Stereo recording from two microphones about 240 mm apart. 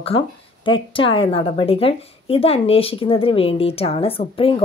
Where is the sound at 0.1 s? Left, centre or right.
Left.